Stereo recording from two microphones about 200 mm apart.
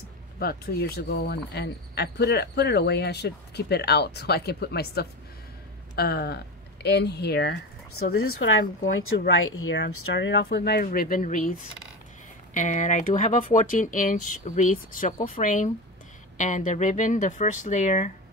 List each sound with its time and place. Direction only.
0.4 s speech: 50° left (ahead or behind)
8.2 s speech: 90° left; by 11.5 s 40° left (ahead or behind)
12.5 s speech: 40° left (ahead or behind)